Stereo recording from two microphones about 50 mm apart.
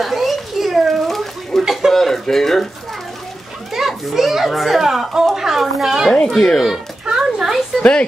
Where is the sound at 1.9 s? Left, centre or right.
Centre.